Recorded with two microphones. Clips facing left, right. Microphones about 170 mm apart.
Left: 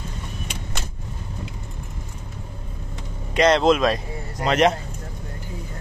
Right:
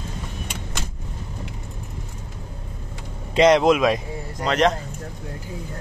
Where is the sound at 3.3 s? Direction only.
15° right (ahead or behind).